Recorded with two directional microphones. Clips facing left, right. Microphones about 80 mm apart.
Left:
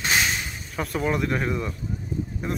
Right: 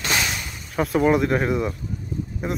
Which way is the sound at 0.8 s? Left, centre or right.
Centre.